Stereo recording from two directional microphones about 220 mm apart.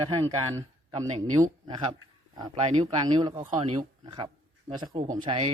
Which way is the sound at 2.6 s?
30° right (ahead or behind).